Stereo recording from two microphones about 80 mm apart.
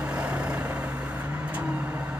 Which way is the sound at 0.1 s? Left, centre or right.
Centre.